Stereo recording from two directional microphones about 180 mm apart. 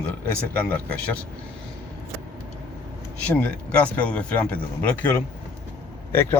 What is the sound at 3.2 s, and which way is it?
Speech, 5° left (ahead or behind).